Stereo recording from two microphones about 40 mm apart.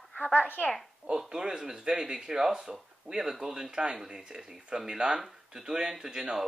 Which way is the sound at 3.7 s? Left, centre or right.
Right.